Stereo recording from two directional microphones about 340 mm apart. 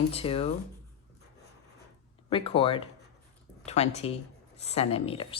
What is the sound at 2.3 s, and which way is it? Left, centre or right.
A woman's voice, centre.